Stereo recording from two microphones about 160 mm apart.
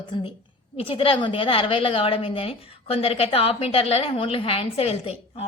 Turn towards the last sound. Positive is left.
turn(degrees=40)  # may be behind; listen again after turning